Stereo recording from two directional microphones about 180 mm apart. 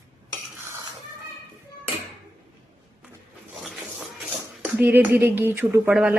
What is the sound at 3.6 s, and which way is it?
Speech, centre (ahead or behind).